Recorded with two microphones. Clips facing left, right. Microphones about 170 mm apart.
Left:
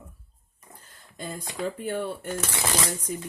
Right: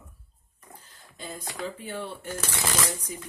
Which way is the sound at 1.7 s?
50° left (ahead or behind).